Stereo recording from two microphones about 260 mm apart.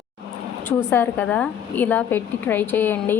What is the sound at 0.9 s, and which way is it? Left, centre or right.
A woman's voice, centre.